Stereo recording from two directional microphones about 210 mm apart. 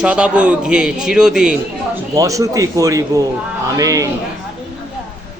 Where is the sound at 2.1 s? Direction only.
15° right (ahead or behind).